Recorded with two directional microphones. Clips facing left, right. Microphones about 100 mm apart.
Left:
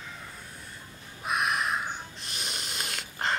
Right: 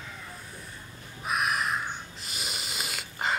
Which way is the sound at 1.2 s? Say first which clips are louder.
Even; centre (ahead or behind).